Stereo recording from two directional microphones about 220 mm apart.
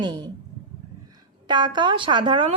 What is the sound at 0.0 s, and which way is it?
Speech, 20° right (ahead or behind).